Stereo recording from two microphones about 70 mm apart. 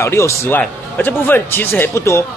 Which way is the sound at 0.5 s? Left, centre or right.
Left.